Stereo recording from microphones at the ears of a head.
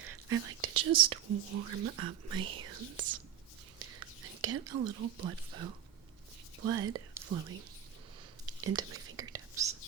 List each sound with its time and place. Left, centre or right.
0.0 s speech: right
8.4 s whispering: right